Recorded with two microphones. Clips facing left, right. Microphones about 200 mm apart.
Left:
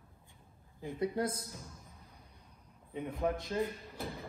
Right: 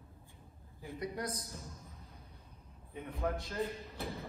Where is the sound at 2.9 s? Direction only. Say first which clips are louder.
Left 3 dB; 15° left (ahead or behind).